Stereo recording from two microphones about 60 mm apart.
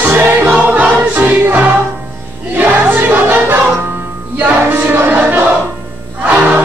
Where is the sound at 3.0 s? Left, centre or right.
Right.